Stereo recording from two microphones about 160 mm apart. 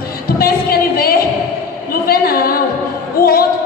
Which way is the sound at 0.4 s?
70° left (ahead or behind).